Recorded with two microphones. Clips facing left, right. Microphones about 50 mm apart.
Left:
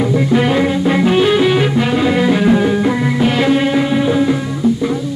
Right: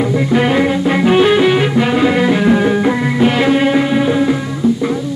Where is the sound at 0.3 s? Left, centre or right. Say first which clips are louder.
Right 2 dB; right.